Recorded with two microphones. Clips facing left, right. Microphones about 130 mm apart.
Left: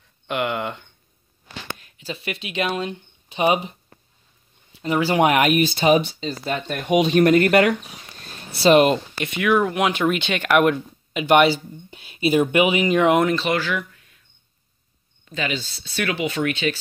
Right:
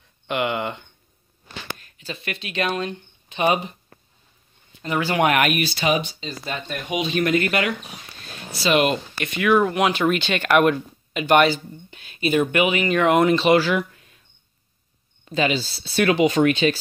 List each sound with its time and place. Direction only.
0.3 s a sound: centre (ahead or behind)
1.9 s speech: 10° left (ahead or behind)
5.1 s speech: 15° left (ahead or behind)
5.8 s speech: 30° left (ahead or behind)
6.4 s speech: 45° left (ahead or behind)
8.6 s speech: 30° left (ahead or behind)
9.3 s speech: centre (ahead or behind)
13.4 s speech: 30° right (ahead or behind)
15.2 s speech: 30° right (ahead or behind)